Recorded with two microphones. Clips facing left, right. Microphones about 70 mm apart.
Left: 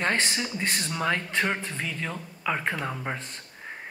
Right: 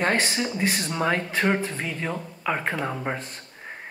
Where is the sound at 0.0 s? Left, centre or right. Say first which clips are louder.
Right 3 dB; centre.